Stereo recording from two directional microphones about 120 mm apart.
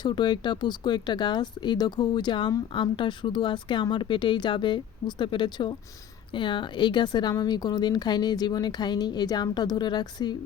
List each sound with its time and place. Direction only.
0.0 s a woman's voice: 40° left (ahead or behind)